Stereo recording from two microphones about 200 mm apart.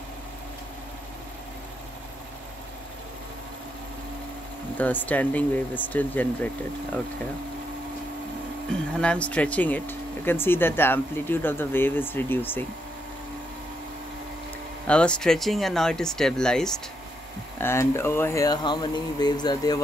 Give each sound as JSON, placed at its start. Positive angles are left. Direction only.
{"t": 4.7, "sound": "speech", "side_deg": 10}
{"t": 8.7, "sound": "speech", "side_deg": 5}
{"t": 14.9, "sound": "speech", "side_deg": 5}